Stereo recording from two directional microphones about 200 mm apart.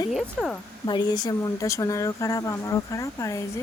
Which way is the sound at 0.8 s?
20° left (ahead or behind).